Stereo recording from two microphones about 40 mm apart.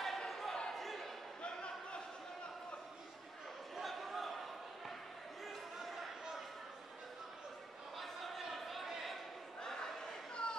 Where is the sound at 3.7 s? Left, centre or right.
Centre.